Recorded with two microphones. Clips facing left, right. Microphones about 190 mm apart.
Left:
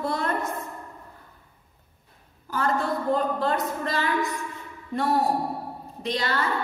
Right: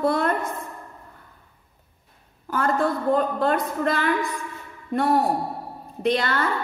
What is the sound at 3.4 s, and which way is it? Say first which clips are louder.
Speech: right 3 dB; 55° right (ahead or behind).